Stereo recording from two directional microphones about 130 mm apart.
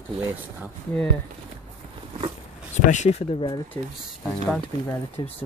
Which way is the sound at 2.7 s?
60° left (ahead or behind).